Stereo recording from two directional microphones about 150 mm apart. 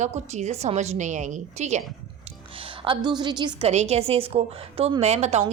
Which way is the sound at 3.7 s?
45° right (ahead or behind).